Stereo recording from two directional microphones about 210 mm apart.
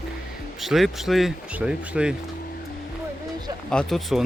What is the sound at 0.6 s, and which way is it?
Speech, centre (ahead or behind).